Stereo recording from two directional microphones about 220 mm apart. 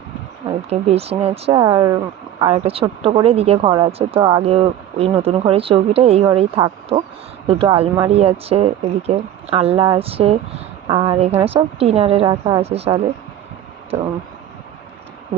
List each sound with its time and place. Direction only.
0.4 s a woman's voice: 25° right (ahead or behind)